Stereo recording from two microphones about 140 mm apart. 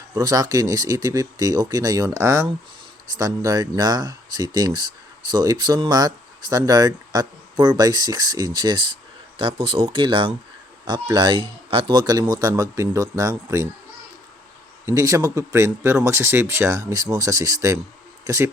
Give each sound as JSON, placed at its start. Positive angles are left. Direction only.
{"t": 0.1, "sound": "speech", "side_deg": -25}
{"t": 14.8, "sound": "speech", "side_deg": -25}